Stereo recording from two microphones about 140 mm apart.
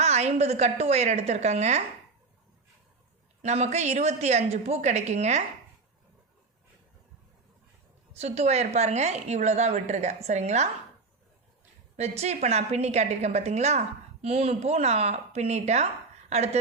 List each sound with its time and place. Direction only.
0.0 s a woman's voice: 50° right (ahead or behind)
3.4 s a woman's voice: 55° right (ahead or behind)
8.1 s a woman's voice: 50° right (ahead or behind)
11.9 s a woman's voice: 50° right (ahead or behind)